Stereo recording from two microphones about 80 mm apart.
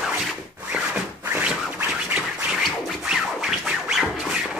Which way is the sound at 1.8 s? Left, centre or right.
Centre.